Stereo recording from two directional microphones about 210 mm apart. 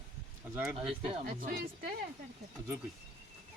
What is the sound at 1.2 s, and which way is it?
Speech, 45° right (ahead or behind).